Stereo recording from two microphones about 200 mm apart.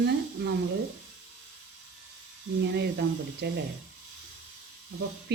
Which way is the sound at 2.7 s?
55° right (ahead or behind).